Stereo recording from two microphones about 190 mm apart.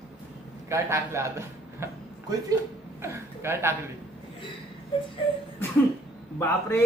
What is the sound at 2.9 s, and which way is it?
Speech, 15° right (ahead or behind).